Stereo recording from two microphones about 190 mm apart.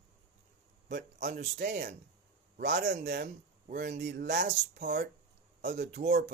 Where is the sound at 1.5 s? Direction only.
55° right (ahead or behind).